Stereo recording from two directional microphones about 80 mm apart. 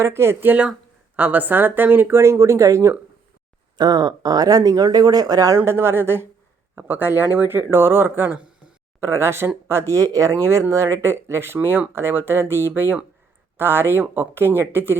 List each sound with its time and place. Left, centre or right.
0.0 s speech: right
1.1 s speech: right
3.8 s speech: right
5.5 s speech: right
9.0 s speech: right